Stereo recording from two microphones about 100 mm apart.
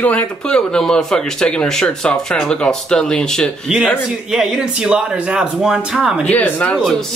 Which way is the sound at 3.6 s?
5° right (ahead or behind).